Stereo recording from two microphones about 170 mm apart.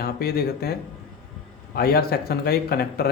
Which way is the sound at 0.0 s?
65° left (ahead or behind).